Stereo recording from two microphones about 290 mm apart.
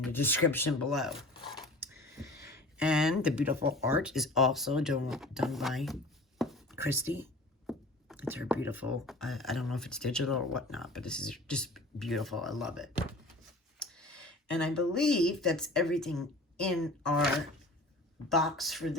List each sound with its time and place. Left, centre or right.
0.0 s speech: centre
1.3 s dog: centre
1.5 s a sound: centre
3.8 s speech: centre
6.4 s a sound: centre
7.7 s speech: centre